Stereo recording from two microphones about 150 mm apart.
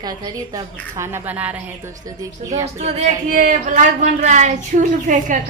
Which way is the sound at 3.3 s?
60° right (ahead or behind).